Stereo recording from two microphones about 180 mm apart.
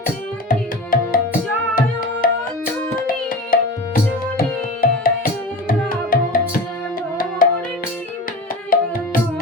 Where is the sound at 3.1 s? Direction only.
50° left (ahead or behind).